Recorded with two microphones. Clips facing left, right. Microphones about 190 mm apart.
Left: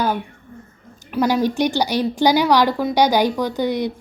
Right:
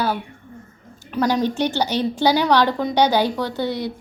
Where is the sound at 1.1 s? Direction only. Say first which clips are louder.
Left 2 dB; 10° left (ahead or behind).